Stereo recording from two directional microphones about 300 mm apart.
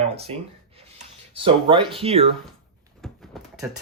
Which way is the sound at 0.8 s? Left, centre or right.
Centre.